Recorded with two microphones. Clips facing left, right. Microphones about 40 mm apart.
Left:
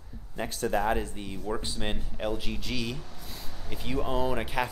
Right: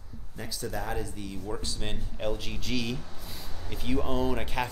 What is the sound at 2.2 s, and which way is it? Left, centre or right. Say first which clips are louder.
Speech: even; centre.